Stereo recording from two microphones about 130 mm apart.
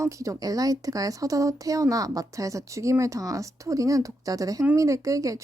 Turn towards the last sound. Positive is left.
turn(degrees=-25)  # may be behind; listen again after turning